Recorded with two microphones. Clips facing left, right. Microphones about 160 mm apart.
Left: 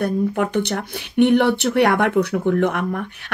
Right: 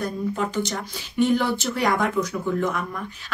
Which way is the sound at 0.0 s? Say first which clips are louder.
Left 6 dB; 65° left (ahead or behind).